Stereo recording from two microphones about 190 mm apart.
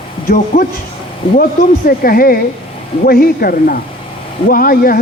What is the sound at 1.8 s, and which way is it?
A man's voice, 50° left (ahead or behind).